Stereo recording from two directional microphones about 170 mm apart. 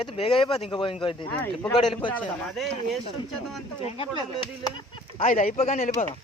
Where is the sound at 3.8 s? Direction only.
35° left (ahead or behind).